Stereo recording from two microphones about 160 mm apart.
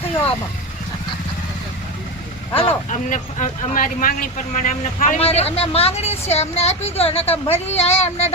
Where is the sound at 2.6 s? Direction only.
40° left (ahead or behind).